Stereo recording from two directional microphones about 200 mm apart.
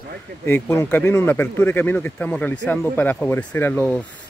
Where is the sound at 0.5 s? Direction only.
15° left (ahead or behind).